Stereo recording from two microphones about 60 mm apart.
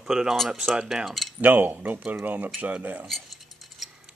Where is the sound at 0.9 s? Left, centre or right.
Centre.